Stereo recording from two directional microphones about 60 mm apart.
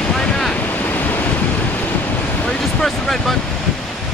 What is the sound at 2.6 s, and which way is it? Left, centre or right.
Speech, centre.